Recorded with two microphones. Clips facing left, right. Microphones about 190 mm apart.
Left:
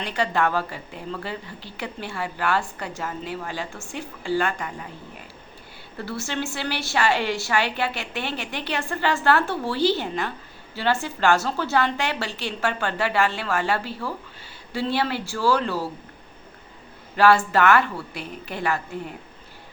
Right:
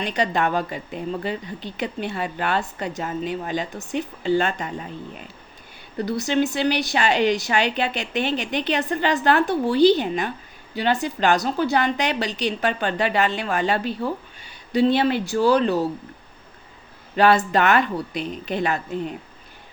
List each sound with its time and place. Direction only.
0.0 s a woman's voice: 20° right (ahead or behind)
17.2 s a woman's voice: 20° right (ahead or behind)